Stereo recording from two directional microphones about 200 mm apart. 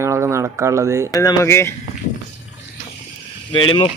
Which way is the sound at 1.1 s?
15° left (ahead or behind).